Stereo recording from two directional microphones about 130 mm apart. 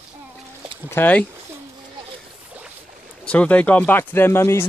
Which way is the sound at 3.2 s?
10° left (ahead or behind).